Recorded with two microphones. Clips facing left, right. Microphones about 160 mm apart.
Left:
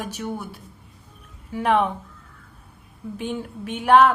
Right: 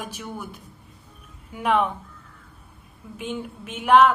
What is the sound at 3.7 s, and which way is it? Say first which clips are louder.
Speech: left 1 dB; 35° left (ahead or behind).